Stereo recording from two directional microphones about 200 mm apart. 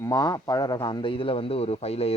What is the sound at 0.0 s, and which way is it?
A man's voice, 20° left (ahead or behind).